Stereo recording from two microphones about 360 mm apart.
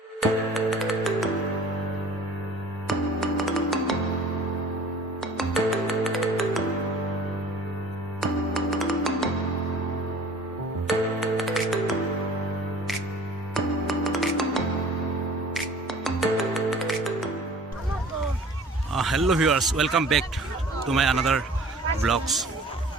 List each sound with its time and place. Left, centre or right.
0.2 s music: centre
2.8 s music: centre
5.2 s music: centre
8.2 s music: centre
10.8 s music: centre
13.5 s music: centre
18.9 s a man's voice: centre